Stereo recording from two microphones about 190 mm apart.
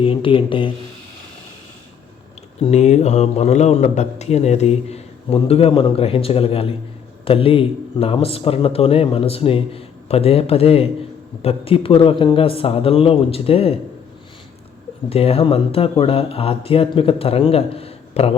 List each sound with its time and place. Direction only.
0.0 s speech: 30° left (ahead or behind)
2.6 s speech: 35° left (ahead or behind)
15.1 s speech: 30° left (ahead or behind)